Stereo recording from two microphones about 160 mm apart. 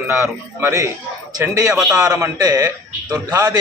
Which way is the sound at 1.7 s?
5° right (ahead or behind).